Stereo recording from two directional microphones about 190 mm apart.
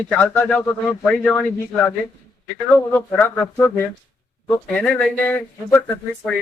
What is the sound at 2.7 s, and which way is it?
Speech, 10° left (ahead or behind).